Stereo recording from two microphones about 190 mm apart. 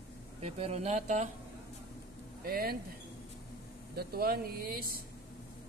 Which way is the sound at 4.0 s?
55° right (ahead or behind).